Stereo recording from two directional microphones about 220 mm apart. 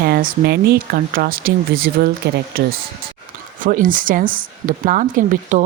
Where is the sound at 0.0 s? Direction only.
40° right (ahead or behind).